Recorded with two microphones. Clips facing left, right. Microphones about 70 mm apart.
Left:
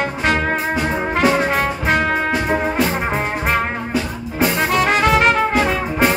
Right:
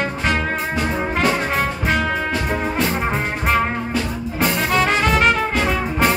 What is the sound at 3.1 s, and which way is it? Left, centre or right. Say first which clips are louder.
Music: left 1 dB; centre.